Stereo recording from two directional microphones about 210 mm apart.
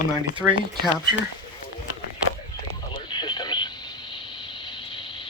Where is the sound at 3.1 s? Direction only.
20° left (ahead or behind).